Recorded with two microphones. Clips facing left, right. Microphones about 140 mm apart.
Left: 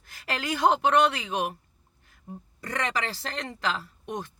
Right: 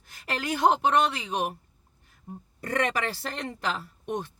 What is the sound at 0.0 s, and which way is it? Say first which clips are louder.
Speech: even; 50° right (ahead or behind).